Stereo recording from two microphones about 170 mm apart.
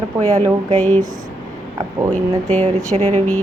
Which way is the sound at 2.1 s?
10° left (ahead or behind).